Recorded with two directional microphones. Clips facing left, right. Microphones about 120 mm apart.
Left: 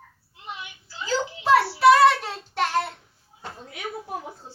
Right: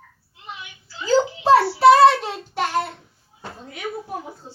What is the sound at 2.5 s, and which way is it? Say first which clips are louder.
Child singing: right 1 dB; 5° right (ahead or behind).